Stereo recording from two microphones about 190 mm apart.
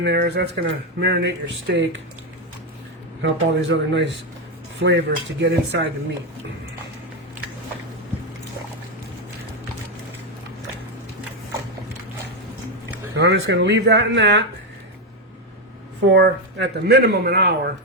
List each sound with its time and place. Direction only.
0.0 s speech: 65° right (ahead or behind)
3.2 s speech: 70° right (ahead or behind)
13.1 s speech: 65° right (ahead or behind)
16.0 s speech: 65° right (ahead or behind)